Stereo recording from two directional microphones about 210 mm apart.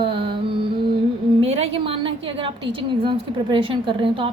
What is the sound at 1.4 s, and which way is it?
A woman's voice, 30° right (ahead or behind).